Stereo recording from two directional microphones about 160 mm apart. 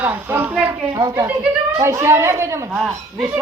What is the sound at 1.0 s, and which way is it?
Speech, 20° right (ahead or behind).